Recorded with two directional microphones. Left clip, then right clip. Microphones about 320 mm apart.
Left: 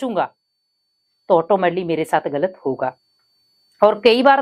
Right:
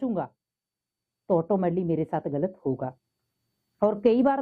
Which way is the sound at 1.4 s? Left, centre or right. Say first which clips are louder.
Left 9 dB; centre.